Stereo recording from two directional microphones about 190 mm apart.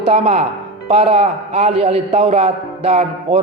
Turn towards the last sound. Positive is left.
turn(degrees=-35)  # may be behind; listen again after turning